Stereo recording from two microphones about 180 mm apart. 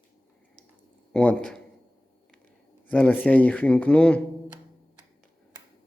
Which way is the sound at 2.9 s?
10° left (ahead or behind).